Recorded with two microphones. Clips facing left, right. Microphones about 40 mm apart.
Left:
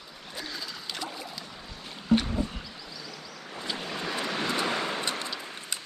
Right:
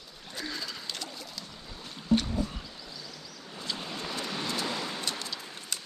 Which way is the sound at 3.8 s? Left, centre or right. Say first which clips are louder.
Left 5 dB; left.